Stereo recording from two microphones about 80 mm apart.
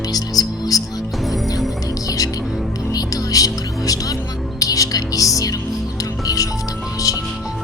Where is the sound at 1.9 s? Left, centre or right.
Left.